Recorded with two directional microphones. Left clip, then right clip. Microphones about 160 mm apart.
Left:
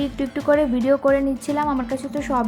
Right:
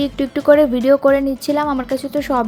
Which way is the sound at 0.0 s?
30° right (ahead or behind).